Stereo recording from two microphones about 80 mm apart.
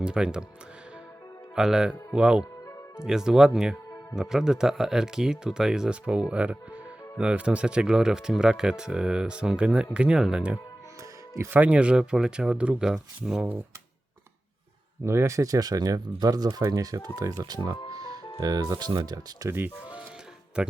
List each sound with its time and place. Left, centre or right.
0.0 s speech: centre
1.5 s speech: centre
15.0 s speech: right
17.4 s speech: right
17.9 s music: right
18.3 s speech: right
19.5 s speech: right
20.6 s speech: centre